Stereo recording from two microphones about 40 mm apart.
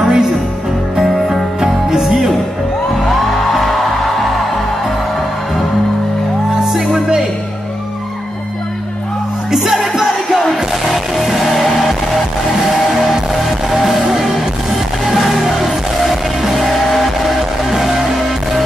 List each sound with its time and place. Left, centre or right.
0.0 s music: centre
1.0 s music: centre
1.6 s music: centre
6.6 s music: centre
9.8 s music: centre